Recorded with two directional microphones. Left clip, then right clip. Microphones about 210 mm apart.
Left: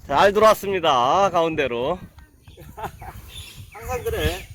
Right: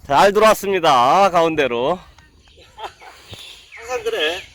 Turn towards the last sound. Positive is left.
turn(degrees=15)  # may be behind; listen again after turning